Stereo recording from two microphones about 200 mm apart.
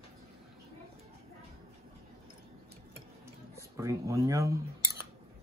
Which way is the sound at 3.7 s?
15° right (ahead or behind).